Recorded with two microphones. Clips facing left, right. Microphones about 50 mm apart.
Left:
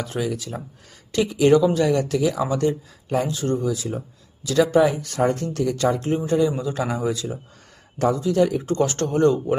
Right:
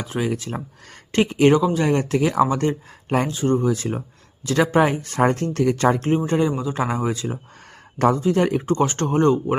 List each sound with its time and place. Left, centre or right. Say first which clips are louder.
0.0 s speech: right 1 dB; right
0.3 s speech: right 2 dB; right
6.7 s speech: right 1 dB; right
7.9 s speech: right 3 dB; right
8.2 s speech: even; right
8.6 s speech: right 1 dB; right